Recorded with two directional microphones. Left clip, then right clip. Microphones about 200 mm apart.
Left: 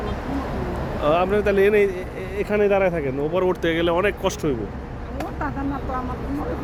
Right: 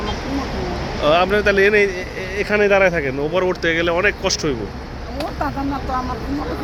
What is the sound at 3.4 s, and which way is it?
Speech, 15° left (ahead or behind).